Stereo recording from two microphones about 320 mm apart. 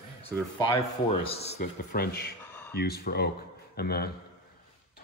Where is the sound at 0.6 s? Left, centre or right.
Centre.